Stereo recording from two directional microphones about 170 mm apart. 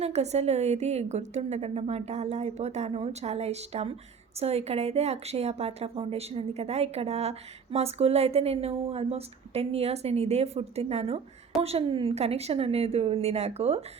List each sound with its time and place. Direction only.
0.0 s a woman's voice: 40° right (ahead or behind)